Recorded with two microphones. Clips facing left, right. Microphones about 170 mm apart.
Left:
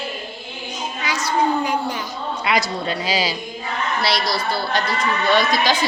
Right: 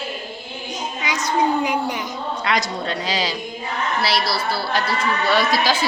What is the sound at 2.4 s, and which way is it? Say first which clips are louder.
Speech: left 2 dB; 5° left (ahead or behind).